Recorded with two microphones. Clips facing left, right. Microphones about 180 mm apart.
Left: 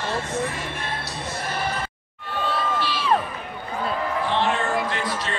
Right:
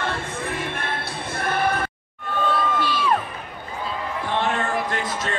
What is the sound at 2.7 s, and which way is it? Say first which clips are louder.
Crowd: right 3 dB; 50° right (ahead or behind).